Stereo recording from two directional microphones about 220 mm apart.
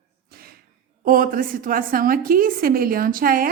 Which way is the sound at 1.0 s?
40° right (ahead or behind).